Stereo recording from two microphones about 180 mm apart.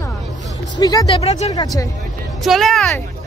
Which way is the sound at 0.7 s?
20° left (ahead or behind).